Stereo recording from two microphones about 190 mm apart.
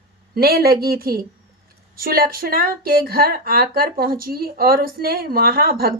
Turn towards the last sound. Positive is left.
turn(degrees=-55)  # may be behind; listen again after turning